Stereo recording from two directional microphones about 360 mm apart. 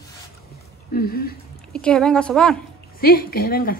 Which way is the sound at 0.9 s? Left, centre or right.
Left.